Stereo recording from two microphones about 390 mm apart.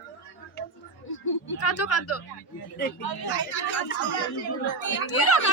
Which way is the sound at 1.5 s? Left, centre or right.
Left.